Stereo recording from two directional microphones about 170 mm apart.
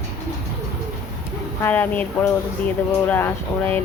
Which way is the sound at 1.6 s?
10° left (ahead or behind).